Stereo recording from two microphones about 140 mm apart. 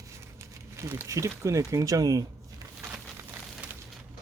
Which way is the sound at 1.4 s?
20° right (ahead or behind).